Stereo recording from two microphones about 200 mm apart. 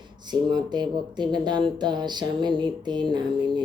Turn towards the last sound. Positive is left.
turn(degrees=-20)  # may be behind; listen again after turning